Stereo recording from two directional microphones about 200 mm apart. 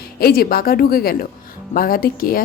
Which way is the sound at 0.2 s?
50° left (ahead or behind).